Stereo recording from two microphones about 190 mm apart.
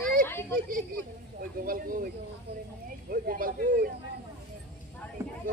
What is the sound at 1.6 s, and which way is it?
Speech, 45° right (ahead or behind).